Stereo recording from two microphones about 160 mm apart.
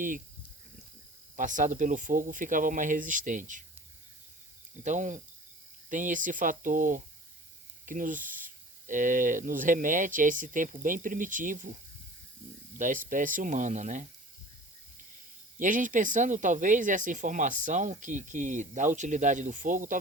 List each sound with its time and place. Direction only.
1.4 s speech: 50° right (ahead or behind)
4.8 s speech: 50° right (ahead or behind)
12.8 s speech: 55° right (ahead or behind)
15.5 s speech: 55° right (ahead or behind)